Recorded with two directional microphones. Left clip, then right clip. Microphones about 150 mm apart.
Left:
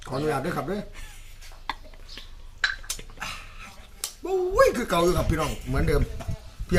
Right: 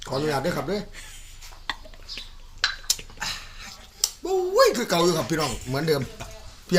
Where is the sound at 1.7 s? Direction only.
30° left (ahead or behind).